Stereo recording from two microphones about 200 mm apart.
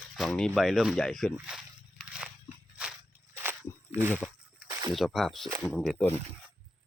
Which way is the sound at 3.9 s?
10° right (ahead or behind).